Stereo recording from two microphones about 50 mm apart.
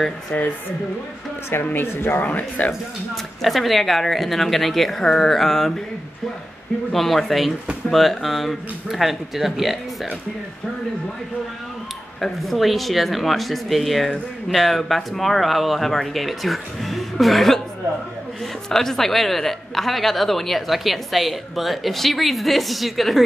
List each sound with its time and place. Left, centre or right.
0.3 s speech: left
1.6 s speech: left
1.9 s speech: left
2.2 s speech: left
3.4 s speech: centre
6.9 s speech: centre
12.2 s speech: centre
18.7 s speech: centre